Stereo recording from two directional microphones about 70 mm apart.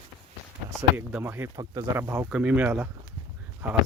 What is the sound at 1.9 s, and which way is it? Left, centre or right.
Speech, right.